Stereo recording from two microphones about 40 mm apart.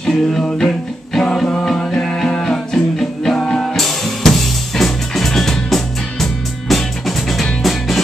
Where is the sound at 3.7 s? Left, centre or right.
Centre.